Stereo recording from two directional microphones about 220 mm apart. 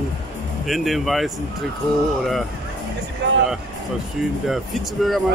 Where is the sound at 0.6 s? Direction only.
Centre (ahead or behind).